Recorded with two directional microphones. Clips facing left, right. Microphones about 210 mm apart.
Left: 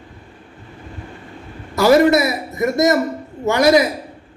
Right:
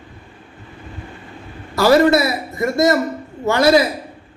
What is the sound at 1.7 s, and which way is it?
A man's voice, 20° left (ahead or behind).